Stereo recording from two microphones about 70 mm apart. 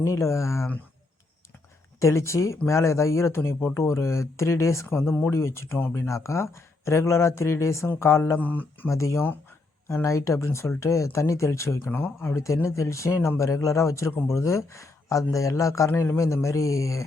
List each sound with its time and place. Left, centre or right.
0.0 s speech: left
2.0 s a man's voice: left
8.4 s speech: left
8.9 s speech: left
11.9 s speech: left
12.6 s speech: left